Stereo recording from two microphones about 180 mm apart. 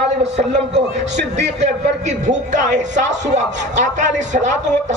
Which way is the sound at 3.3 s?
40° right (ahead or behind).